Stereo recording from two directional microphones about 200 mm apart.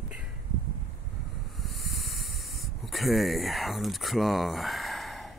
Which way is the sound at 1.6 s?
Centre (ahead or behind).